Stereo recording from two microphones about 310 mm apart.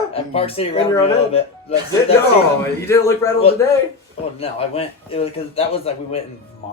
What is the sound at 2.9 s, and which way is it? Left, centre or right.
A man's voice, centre.